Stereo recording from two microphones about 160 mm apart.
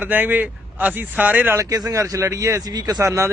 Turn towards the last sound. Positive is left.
turn(degrees=-20)  # may be behind; listen again after turning